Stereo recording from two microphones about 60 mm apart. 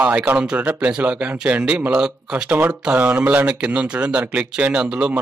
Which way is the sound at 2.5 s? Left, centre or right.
Right.